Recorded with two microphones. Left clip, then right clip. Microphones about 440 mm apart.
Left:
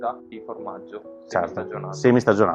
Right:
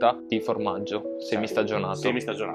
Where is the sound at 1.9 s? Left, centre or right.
Left.